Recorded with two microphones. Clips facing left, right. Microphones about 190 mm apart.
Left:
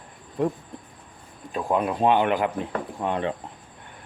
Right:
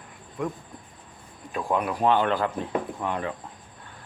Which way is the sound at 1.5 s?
20° left (ahead or behind).